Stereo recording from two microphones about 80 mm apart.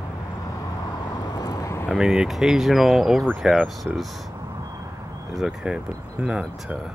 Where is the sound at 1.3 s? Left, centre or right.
Left.